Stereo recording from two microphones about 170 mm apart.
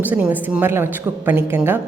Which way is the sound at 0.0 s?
10° right (ahead or behind).